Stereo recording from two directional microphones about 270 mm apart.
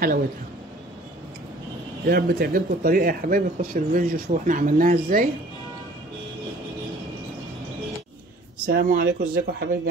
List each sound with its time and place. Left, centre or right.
2.0 s speech: right
8.6 s speech: right